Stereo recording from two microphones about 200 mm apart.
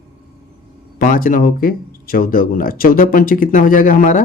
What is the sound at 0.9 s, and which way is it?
Speech, 45° left (ahead or behind).